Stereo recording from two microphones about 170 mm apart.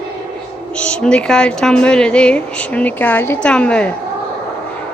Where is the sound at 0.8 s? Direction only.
5° left (ahead or behind).